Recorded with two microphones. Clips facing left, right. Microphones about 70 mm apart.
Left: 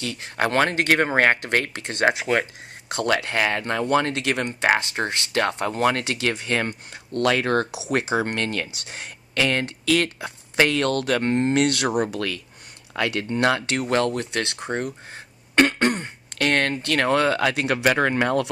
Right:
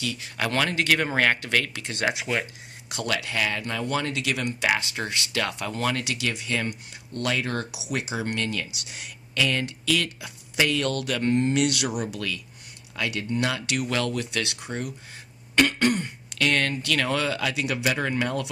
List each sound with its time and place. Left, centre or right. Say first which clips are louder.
0.0 s speech: left 4 dB; left
7.8 s speech: left 7 dB; left